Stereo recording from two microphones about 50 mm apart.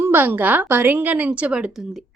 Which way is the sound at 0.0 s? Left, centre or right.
Right.